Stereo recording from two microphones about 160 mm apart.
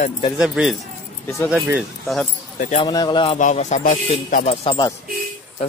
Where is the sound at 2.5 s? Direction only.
55° left (ahead or behind).